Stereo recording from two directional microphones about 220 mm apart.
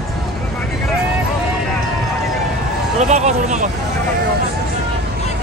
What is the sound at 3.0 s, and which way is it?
Vehicle, 30° right (ahead or behind).